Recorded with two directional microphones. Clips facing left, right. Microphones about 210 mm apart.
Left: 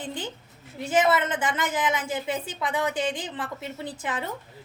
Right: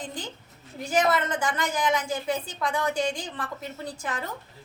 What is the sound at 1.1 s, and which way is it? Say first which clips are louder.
A woman's voice: left 1 dB; 20° left (ahead or behind).